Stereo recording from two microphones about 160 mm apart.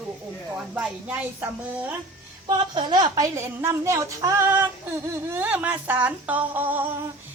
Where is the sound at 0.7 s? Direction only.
10° right (ahead or behind).